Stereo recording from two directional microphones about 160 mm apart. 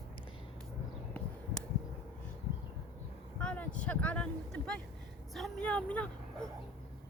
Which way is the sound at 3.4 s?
5° left (ahead or behind).